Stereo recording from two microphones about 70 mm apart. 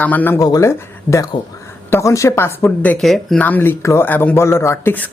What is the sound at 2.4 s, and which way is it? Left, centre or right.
Speech, left.